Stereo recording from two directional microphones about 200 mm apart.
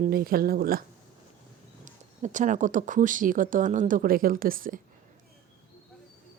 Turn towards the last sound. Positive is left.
turn(degrees=-45)  # may be behind; listen again after turning